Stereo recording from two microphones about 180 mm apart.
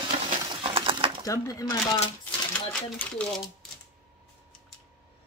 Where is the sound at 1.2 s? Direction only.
15° left (ahead or behind).